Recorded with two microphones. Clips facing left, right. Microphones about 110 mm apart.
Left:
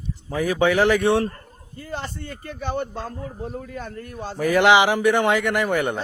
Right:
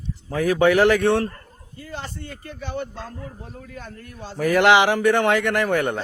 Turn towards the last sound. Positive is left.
turn(degrees=5)  # may be behind; listen again after turning